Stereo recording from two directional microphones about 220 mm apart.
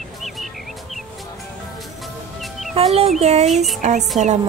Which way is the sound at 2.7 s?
25° right (ahead or behind).